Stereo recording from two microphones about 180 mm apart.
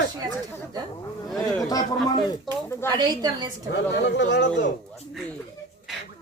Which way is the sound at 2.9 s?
25° right (ahead or behind).